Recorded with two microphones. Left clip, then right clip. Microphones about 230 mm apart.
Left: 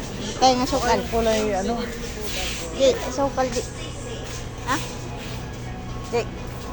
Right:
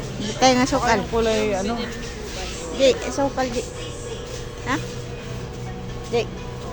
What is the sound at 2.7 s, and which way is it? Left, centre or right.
Speech, right.